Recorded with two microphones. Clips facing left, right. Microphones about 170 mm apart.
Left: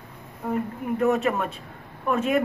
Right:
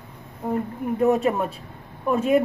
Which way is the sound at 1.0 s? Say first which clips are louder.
Right 3 dB; 25° right (ahead or behind).